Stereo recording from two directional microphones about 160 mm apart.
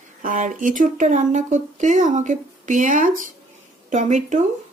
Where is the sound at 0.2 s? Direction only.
55° right (ahead or behind).